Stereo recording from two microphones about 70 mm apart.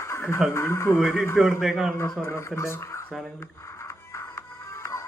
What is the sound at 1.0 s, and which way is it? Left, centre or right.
Speech, centre.